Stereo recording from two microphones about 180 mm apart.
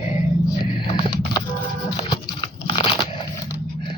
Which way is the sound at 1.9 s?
25° left (ahead or behind).